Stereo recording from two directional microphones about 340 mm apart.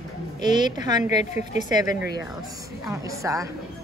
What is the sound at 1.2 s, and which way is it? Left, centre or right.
A woman's voice, centre.